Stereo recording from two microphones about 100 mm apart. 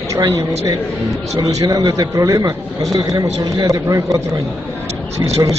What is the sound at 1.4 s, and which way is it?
A man's voice, 45° right (ahead or behind).